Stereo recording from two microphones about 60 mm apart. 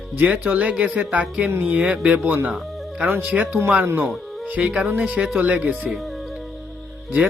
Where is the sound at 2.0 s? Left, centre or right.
Right.